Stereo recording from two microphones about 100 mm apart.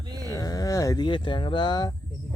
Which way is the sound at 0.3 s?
35° left (ahead or behind).